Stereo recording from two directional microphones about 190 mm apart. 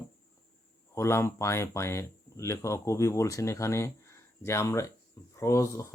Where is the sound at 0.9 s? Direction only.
15° left (ahead or behind).